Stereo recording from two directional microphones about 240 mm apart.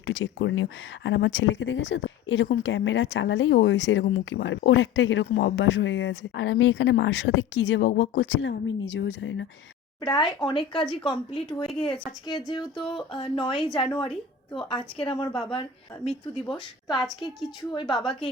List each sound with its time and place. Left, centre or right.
0.0 s speech: left
10.0 s speech: centre